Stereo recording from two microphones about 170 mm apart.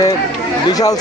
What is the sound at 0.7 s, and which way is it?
Speech, 20° left (ahead or behind).